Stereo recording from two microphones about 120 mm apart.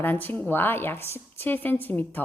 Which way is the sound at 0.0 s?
15° left (ahead or behind).